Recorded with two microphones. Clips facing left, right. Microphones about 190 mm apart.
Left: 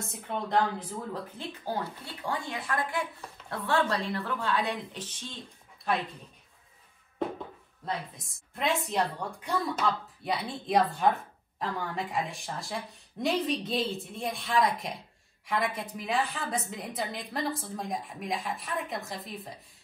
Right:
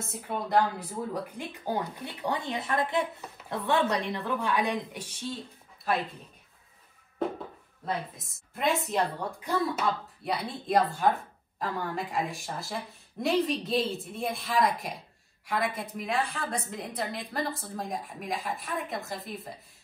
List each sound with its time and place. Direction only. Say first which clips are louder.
0.0 s speech: right 1 dB; 5° right (ahead or behind)
7.8 s speech: right 2 dB; centre (ahead or behind)